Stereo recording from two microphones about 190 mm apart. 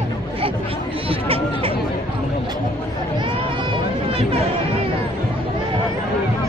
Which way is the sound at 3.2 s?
25° right (ahead or behind).